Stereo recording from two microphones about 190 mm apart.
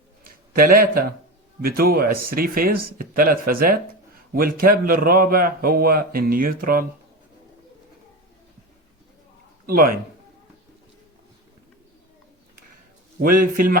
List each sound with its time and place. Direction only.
0.3 s a man's voice: 50° right (ahead or behind)
9.6 s a man's voice: 50° right (ahead or behind)
13.2 s a man's voice: 50° right (ahead or behind)